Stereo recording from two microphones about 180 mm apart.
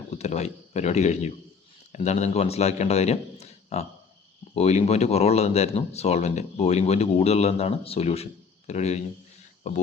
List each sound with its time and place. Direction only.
0.1 s speech: 40° left (ahead or behind)